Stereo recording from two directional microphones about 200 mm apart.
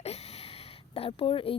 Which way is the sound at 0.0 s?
30° left (ahead or behind).